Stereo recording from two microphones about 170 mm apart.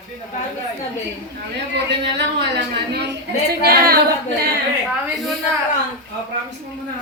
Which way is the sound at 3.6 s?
65° right (ahead or behind).